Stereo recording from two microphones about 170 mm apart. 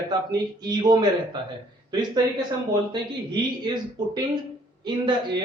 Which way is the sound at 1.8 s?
25° right (ahead or behind).